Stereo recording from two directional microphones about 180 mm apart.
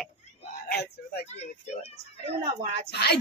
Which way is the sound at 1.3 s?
35° left (ahead or behind).